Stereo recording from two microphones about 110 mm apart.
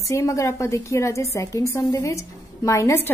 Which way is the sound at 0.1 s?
30° left (ahead or behind).